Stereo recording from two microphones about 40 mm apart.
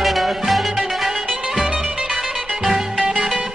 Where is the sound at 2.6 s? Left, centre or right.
Centre.